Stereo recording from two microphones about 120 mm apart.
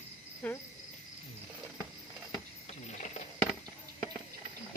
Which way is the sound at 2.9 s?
75° left (ahead or behind).